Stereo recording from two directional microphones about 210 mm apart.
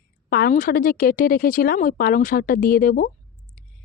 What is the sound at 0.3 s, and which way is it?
Speech, 45° left (ahead or behind).